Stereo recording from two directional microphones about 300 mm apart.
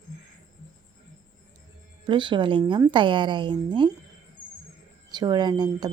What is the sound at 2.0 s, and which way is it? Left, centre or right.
A woman's voice, centre.